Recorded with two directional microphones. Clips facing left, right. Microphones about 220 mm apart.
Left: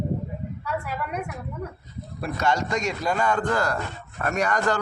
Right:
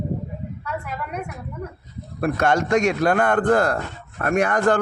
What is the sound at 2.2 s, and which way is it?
A man's voice, 55° right (ahead or behind).